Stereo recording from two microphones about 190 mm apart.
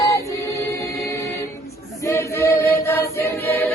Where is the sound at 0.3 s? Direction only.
15° left (ahead or behind).